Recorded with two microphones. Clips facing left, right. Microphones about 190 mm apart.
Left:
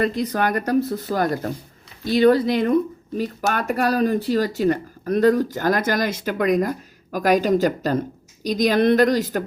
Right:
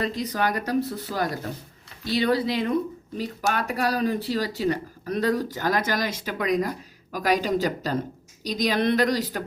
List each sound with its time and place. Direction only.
0.0 s speech: 55° left (ahead or behind)